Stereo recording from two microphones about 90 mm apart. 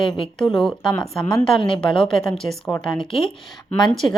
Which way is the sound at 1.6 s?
75° left (ahead or behind).